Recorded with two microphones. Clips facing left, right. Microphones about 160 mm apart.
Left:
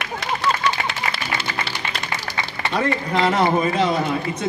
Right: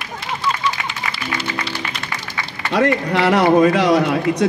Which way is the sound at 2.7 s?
75° right (ahead or behind).